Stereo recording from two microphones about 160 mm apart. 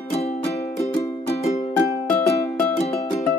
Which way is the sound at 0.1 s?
40° left (ahead or behind).